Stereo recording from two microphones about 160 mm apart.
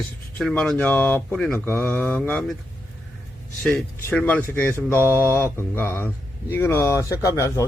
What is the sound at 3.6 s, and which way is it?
A man's voice, 10° left (ahead or behind).